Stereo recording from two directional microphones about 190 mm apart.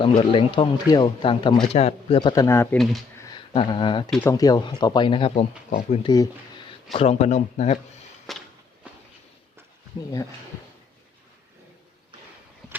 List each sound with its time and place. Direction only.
0.2 s speech: 25° left (ahead or behind)
2.7 s speech: centre (ahead or behind)
3.2 s a sound: 20° left (ahead or behind)
3.5 s speech: 25° left (ahead or behind)
4.1 s speech: 15° left (ahead or behind); by 7.8 s 40° left (ahead or behind)
8.3 s a sound: centre (ahead or behind)